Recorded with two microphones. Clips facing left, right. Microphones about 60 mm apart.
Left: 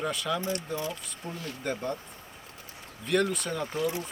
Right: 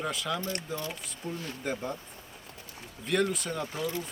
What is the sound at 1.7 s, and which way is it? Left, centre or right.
Speech, centre.